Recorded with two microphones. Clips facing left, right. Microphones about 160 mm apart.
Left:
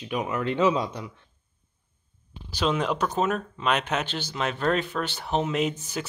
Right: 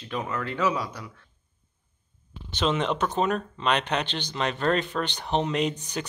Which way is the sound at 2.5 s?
Centre (ahead or behind).